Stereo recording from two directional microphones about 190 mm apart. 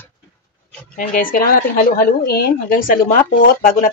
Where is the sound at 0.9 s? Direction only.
45° left (ahead or behind).